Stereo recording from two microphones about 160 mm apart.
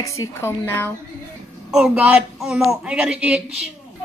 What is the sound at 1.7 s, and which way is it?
A woman's voice, 5° right (ahead or behind).